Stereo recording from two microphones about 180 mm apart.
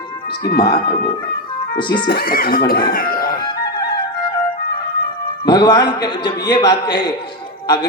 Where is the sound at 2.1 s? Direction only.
55° left (ahead or behind).